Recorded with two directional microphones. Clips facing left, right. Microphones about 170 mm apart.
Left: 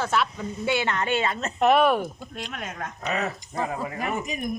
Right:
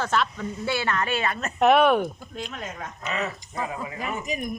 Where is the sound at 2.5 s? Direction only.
65° left (ahead or behind).